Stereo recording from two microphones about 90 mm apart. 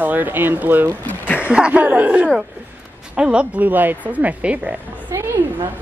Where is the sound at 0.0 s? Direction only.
20° right (ahead or behind).